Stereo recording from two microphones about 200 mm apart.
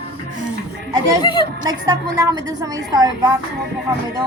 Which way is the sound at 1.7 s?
20° right (ahead or behind).